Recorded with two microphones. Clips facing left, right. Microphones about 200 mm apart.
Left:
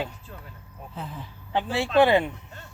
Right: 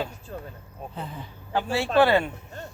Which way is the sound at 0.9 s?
Centre (ahead or behind).